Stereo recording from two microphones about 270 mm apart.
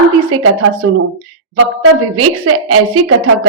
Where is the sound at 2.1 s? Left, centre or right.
Right.